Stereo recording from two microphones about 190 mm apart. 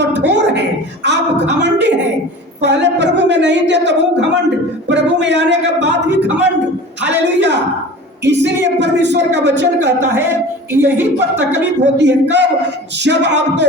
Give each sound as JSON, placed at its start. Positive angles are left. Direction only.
{"t": 0.0, "sound": "speech", "side_deg": -65}
{"t": 10.7, "sound": "a woman's voice", "side_deg": -10}
{"t": 11.9, "sound": "speech", "side_deg": -65}